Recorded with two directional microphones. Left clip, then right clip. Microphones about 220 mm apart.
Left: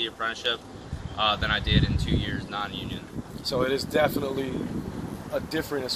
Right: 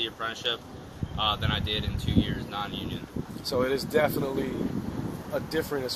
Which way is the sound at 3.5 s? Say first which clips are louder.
Left 1 dB; 30° right (ahead or behind).